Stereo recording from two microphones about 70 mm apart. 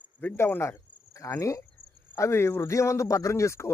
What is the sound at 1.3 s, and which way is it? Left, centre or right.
Speech, left.